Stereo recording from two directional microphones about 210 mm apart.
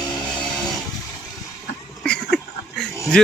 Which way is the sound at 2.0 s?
5° left (ahead or behind).